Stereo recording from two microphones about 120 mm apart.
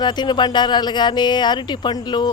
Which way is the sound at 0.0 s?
35° left (ahead or behind).